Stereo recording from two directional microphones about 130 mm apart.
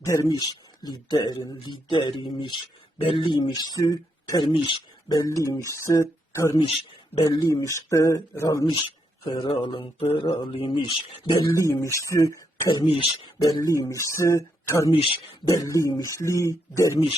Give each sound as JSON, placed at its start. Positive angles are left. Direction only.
{"t": 0.0, "sound": "speech", "side_deg": 25}
{"t": 8.6, "sound": "speech", "side_deg": 40}
{"t": 11.5, "sound": "speech", "side_deg": 25}